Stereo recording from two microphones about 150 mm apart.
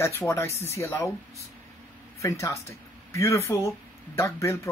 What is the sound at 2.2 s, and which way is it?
Speech, 20° left (ahead or behind).